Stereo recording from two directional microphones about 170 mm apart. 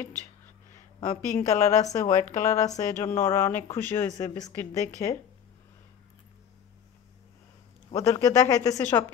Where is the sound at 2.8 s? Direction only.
15° left (ahead or behind).